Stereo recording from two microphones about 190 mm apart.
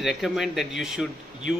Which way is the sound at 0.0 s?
Centre (ahead or behind).